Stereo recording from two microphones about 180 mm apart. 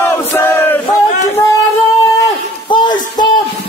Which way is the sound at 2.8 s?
25° left (ahead or behind).